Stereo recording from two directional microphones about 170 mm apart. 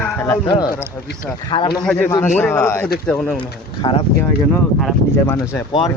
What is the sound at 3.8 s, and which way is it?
Speech, 30° left (ahead or behind).